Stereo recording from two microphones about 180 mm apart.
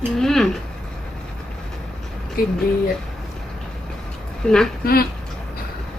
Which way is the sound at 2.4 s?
55° left (ahead or behind).